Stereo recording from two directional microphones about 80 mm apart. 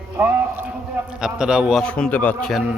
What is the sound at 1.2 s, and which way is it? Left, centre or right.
Speech, centre.